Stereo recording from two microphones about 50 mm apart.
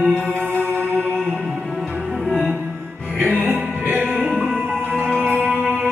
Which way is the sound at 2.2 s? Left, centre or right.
Centre.